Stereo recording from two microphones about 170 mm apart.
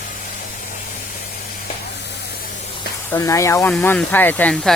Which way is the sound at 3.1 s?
20° left (ahead or behind).